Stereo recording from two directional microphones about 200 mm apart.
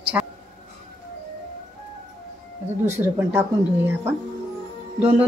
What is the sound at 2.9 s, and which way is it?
Speech, 10° right (ahead or behind).